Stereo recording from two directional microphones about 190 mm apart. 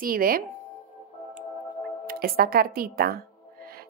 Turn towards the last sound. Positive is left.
turn(degrees=-50)  # may be behind; listen again after turning